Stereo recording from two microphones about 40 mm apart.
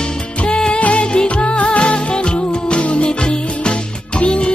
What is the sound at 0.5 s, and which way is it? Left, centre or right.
Music, left.